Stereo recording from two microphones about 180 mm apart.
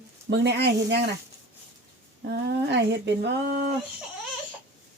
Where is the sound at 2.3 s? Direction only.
70° right (ahead or behind).